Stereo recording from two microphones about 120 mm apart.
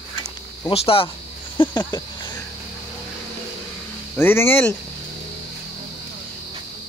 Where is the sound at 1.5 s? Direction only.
45° left (ahead or behind).